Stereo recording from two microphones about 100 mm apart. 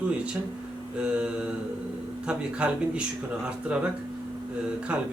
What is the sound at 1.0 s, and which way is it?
Speech, 10° right (ahead or behind).